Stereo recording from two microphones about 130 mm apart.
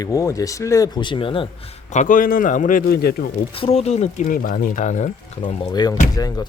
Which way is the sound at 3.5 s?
50° left (ahead or behind).